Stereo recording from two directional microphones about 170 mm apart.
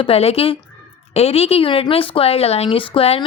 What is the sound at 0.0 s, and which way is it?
A woman's voice, 35° left (ahead or behind).